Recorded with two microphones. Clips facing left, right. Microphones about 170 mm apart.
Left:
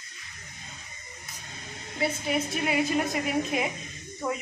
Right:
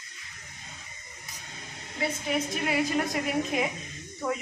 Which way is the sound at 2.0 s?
5° left (ahead or behind).